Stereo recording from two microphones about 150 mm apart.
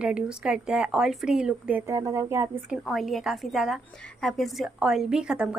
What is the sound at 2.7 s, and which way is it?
A woman's voice, centre (ahead or behind).